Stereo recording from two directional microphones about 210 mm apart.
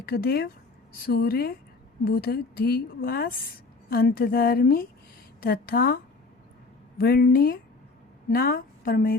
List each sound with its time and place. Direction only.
0.0 s a woman's voice: 45° left (ahead or behind)
7.0 s a woman's voice: 45° left (ahead or behind)